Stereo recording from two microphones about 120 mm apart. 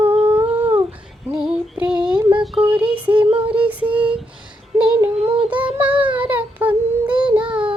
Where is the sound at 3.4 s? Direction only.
10° right (ahead or behind).